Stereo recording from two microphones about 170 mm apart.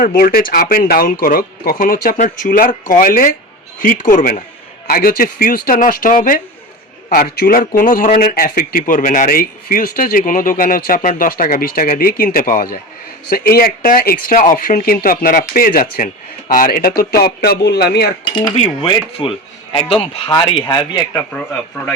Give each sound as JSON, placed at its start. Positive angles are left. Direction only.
{"t": 0.0, "sound": "a man's voice", "side_deg": 55}
{"t": 18.8, "sound": "a man's voice", "side_deg": 30}
{"t": 21.3, "sound": "speech", "side_deg": 5}